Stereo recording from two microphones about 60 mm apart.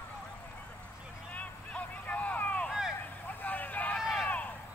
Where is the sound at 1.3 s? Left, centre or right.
Left.